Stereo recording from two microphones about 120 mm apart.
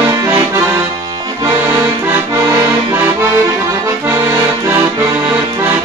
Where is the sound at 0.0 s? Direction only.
25° right (ahead or behind).